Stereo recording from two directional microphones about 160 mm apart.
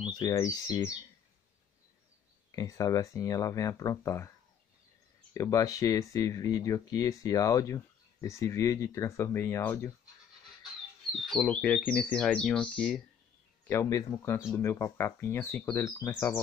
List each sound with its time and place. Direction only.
0.0 s speech: 25° left (ahead or behind)
2.5 s speech: 20° left (ahead or behind)
5.3 s speech: 20° left (ahead or behind)
11.1 s speech: centre (ahead or behind)
13.7 s speech: 20° left (ahead or behind)